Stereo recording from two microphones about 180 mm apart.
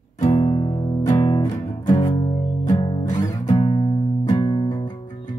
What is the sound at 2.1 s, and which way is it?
Music, 25° left (ahead or behind).